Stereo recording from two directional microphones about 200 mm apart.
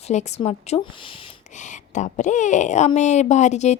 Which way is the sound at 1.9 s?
35° left (ahead or behind).